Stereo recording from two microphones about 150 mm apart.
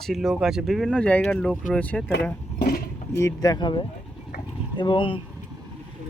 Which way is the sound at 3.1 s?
20° left (ahead or behind).